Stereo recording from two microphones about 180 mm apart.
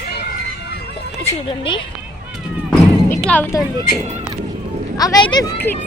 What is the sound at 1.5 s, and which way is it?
Speech, 30° left (ahead or behind).